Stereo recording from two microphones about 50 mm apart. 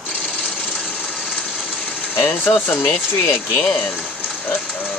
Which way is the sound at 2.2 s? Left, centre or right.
Left.